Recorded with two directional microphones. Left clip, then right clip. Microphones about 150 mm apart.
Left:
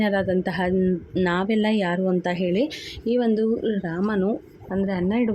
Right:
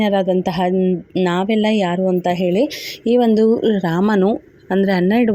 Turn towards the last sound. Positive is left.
turn(degrees=-45)  # may be behind; listen again after turning